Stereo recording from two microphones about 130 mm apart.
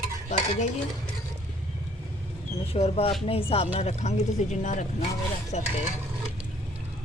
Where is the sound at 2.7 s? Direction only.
50° left (ahead or behind).